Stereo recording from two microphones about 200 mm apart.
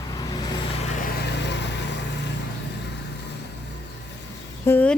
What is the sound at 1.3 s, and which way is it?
Vehicle, 60° left (ahead or behind).